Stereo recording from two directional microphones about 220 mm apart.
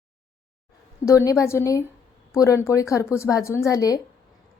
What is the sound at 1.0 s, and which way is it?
A woman's voice, 15° left (ahead or behind).